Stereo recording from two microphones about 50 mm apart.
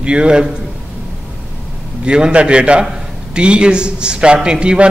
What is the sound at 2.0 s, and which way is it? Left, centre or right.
A man's voice, right.